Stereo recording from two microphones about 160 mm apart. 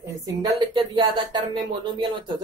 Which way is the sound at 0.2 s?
25° right (ahead or behind).